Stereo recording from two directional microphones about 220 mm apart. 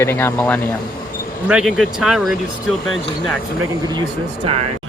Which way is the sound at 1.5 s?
Centre (ahead or behind).